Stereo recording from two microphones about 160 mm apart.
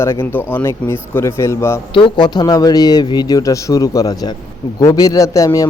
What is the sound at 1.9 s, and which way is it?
A man's voice, 30° left (ahead or behind).